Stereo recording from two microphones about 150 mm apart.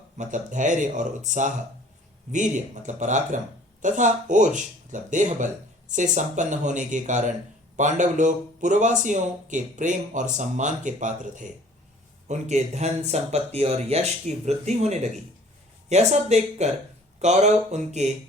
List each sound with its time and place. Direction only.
0.2 s speech: 55° right (ahead or behind)